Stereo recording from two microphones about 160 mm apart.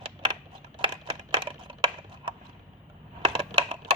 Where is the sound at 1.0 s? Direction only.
35° right (ahead or behind).